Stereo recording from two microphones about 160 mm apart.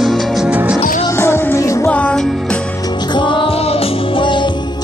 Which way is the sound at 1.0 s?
15° left (ahead or behind).